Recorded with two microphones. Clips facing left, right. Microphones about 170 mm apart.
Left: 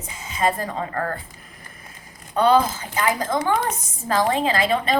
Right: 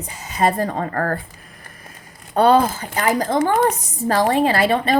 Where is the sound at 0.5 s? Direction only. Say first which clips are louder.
Right 5 dB; 55° right (ahead or behind).